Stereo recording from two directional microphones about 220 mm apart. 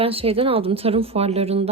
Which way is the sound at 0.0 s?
25° right (ahead or behind).